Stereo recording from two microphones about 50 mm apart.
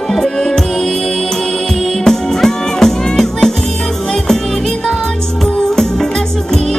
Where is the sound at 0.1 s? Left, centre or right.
Centre.